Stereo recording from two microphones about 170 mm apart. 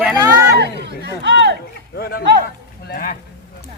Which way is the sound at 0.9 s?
85° right.